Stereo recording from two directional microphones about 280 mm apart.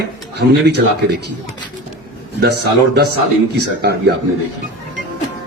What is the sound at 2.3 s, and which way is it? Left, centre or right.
A man's voice, right.